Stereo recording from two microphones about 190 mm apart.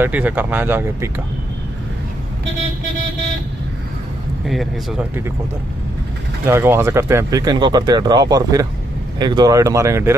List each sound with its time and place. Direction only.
0.0 s speech: 10° right (ahead or behind)
6.4 s speech: 15° right (ahead or behind)